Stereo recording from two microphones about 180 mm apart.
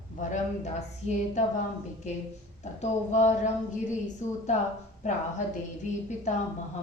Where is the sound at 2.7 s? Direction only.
40° left (ahead or behind).